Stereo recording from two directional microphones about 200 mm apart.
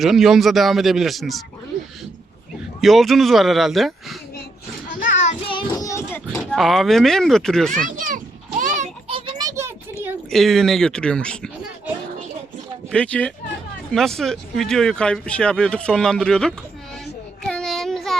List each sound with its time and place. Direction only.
0.0 s speech: centre (ahead or behind)
2.8 s speech: centre (ahead or behind)
4.9 s children playing: 40° left (ahead or behind)
5.5 s child singing: 20° left (ahead or behind)
6.6 s speech: centre (ahead or behind)
7.9 s children playing: 40° right (ahead or behind); by 9.7 s 15° right (ahead or behind)
10.2 s speech: centre (ahead or behind)
12.9 s speech: 5° left (ahead or behind)
17.4 s child singing: 5° left (ahead or behind)